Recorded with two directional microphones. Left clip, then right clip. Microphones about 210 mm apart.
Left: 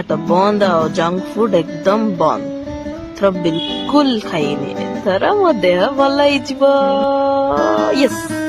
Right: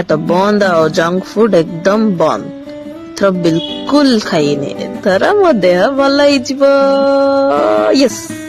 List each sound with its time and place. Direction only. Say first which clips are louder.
0.1 s speech: right 2 dB; 20° right (ahead or behind)